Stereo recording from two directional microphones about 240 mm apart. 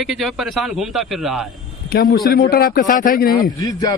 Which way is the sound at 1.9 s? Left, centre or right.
Left.